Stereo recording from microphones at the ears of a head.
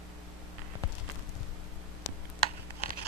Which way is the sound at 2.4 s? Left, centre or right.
Right.